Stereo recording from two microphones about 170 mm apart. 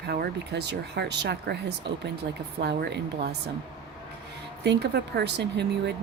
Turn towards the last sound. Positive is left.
turn(degrees=-85)